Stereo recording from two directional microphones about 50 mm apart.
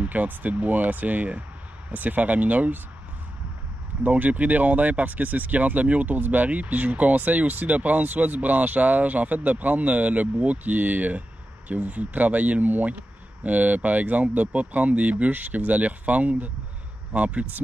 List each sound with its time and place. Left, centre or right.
0.0 s speech: right
4.0 s speech: right